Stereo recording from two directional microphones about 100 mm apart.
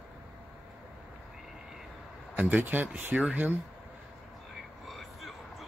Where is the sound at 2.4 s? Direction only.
15° right (ahead or behind).